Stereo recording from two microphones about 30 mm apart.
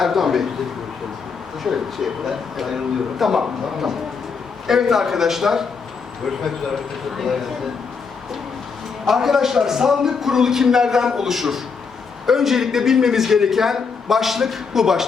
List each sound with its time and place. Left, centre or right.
0.0 s a man's voice: centre
1.6 s a man's voice: centre
7.2 s speech: centre
9.0 s a man's voice: centre